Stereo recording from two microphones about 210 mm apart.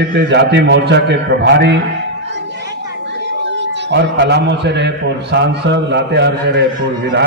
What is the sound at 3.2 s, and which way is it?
A man's voice, 55° right (ahead or behind).